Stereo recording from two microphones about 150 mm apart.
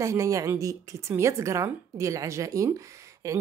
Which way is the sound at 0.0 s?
20° right (ahead or behind).